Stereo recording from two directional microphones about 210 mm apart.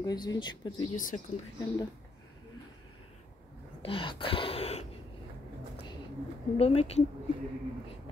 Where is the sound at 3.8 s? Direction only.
25° left (ahead or behind).